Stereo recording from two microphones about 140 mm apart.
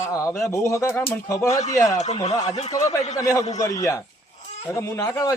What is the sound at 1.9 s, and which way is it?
Speech, 55° left (ahead or behind).